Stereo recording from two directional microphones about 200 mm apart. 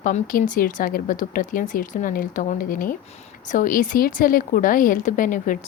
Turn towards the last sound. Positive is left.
turn(degrees=40)  # may be behind; listen again after turning